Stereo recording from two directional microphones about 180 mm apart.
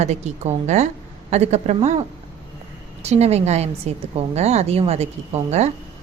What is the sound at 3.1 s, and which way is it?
Speech, 35° right (ahead or behind).